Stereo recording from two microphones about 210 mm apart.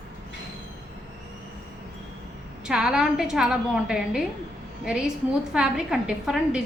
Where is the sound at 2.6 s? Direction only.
5° right (ahead or behind).